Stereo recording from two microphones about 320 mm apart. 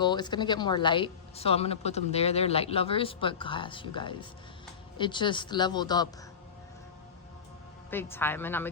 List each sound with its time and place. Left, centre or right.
0.0 s speech: centre
7.9 s speech: centre